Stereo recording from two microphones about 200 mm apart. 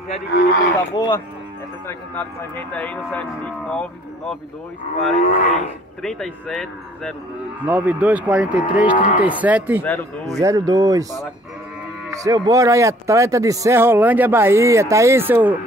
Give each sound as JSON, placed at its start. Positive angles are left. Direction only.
{"t": 0.3, "sound": "speech", "side_deg": 50}
{"t": 0.9, "sound": "speech", "side_deg": 20}
{"t": 4.9, "sound": "livestock", "side_deg": 40}
{"t": 6.0, "sound": "speech", "side_deg": 0}
{"t": 8.9, "sound": "livestock", "side_deg": 40}
{"t": 9.2, "sound": "speech", "side_deg": -5}
{"t": 10.4, "sound": "speech", "side_deg": -20}
{"t": 12.1, "sound": "speech", "side_deg": -15}